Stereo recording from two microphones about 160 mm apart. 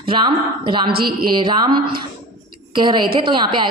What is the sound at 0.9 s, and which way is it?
Speech, 70° right (ahead or behind).